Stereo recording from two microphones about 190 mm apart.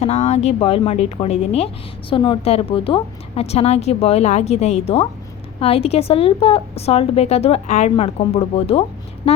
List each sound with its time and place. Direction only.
0.0 s speech: 35° left (ahead or behind)